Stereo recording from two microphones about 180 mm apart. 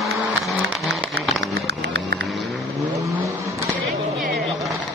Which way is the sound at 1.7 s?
70° right (ahead or behind).